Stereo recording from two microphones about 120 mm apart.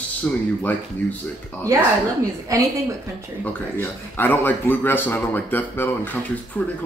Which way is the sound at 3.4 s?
15° left (ahead or behind).